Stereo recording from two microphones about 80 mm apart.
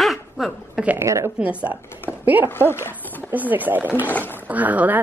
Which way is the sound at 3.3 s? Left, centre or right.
Right.